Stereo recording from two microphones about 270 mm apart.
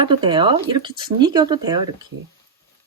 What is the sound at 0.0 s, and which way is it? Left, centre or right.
Speech, centre.